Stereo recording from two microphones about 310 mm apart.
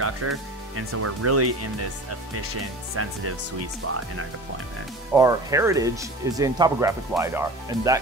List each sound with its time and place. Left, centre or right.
0.0 s speech: right
5.1 s speech: centre